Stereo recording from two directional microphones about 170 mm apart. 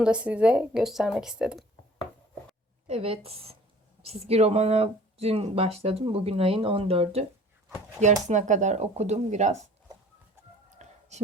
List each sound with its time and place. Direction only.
0.0 s speech: 5° right (ahead or behind)
2.8 s speech: 35° right (ahead or behind)
10.7 s whispering: 45° right (ahead or behind)